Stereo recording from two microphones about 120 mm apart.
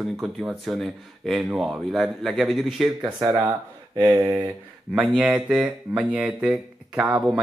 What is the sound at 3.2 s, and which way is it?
Speech, 35° right (ahead or behind).